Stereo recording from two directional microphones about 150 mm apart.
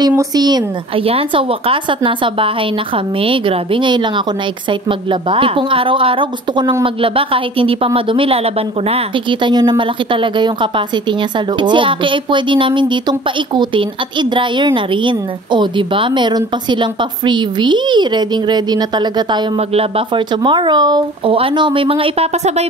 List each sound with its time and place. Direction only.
0.4 s a woman's voice: 25° right (ahead or behind)
1.0 s speech: 40° right (ahead or behind)
5.3 s speech: 35° right (ahead or behind)
14.3 s a woman's voice: 35° right (ahead or behind)
20.4 s speech: 30° right (ahead or behind)